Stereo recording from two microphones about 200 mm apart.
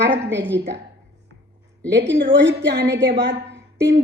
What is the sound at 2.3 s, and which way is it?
A woman's voice, 65° right (ahead or behind).